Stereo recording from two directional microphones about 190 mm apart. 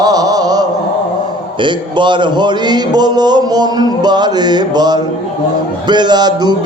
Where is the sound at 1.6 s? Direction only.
25° right (ahead or behind).